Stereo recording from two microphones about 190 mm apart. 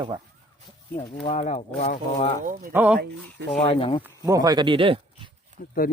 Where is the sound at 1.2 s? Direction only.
35° left (ahead or behind).